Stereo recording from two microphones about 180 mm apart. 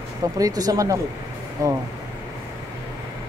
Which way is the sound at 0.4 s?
20° right (ahead or behind).